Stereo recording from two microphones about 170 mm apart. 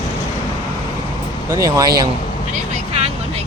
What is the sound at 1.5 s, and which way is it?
Speech, 20° right (ahead or behind).